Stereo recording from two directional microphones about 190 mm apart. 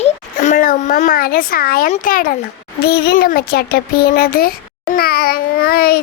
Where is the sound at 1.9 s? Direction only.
45° left (ahead or behind).